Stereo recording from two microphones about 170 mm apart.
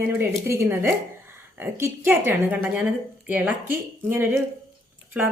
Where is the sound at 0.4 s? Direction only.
15° right (ahead or behind).